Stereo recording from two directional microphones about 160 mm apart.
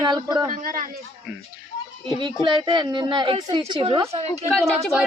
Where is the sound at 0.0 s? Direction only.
25° right (ahead or behind).